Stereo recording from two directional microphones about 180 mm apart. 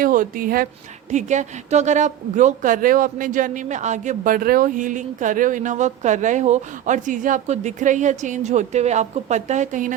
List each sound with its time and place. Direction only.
0.0 s speech: 50° right (ahead or behind)
1.1 s a woman's voice: 40° right (ahead or behind)